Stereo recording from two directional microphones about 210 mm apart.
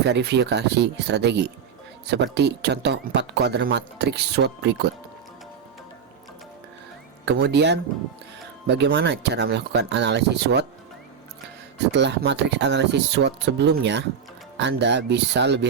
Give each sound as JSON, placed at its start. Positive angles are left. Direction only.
{"t": 0.0, "sound": "speech", "side_deg": -55}
{"t": 7.3, "sound": "speech", "side_deg": -55}
{"t": 11.8, "sound": "speech", "side_deg": -55}